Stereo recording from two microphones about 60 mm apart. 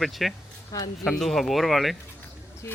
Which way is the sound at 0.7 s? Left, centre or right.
Left.